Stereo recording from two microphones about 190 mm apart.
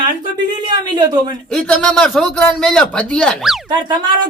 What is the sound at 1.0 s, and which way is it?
Speech, 20° right (ahead or behind).